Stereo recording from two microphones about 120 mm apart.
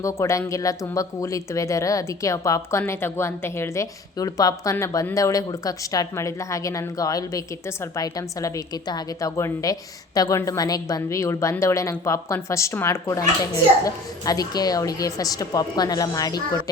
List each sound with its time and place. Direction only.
0.0 s speech: 25° left (ahead or behind)